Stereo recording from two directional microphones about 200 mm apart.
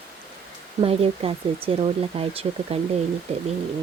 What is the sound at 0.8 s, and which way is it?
Speech, 30° right (ahead or behind).